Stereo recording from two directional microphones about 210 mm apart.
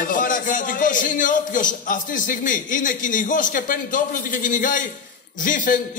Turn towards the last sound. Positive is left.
turn(degrees=40)  # may be behind; listen again after turning